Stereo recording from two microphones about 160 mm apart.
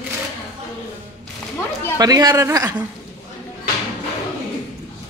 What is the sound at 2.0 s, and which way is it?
Speech, 25° right (ahead or behind).